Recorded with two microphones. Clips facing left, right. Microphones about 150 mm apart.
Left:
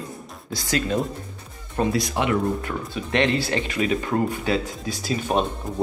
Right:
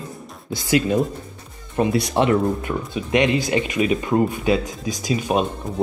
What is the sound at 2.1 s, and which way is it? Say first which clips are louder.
Speech: right 5 dB; 35° right (ahead or behind).